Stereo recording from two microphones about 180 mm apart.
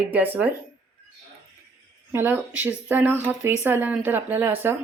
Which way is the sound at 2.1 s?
10° right (ahead or behind).